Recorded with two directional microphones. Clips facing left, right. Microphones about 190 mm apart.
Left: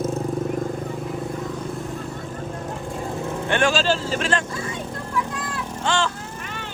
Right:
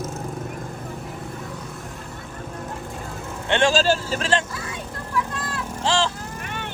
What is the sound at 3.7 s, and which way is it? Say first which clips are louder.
Speech: right 1 dB; 40° right (ahead or behind).